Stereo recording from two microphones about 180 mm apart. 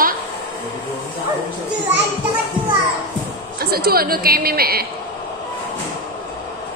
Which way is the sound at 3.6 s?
60° right (ahead or behind).